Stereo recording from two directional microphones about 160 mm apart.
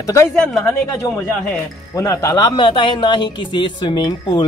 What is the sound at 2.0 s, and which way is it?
A man's voice, 20° left (ahead or behind).